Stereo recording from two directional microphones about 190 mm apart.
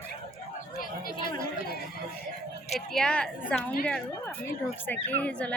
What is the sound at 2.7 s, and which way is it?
Speech, 5° left (ahead or behind).